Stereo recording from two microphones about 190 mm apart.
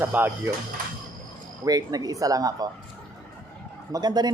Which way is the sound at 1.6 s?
20° right (ahead or behind).